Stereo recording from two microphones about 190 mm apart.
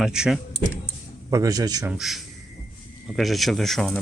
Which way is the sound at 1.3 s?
20° right (ahead or behind).